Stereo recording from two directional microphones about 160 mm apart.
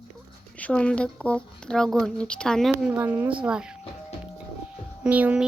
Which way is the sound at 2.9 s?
10° right (ahead or behind).